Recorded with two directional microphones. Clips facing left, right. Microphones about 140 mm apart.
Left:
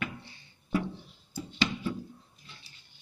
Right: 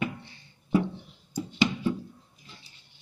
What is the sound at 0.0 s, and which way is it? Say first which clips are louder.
Music: right 6 dB; 25° right (ahead or behind).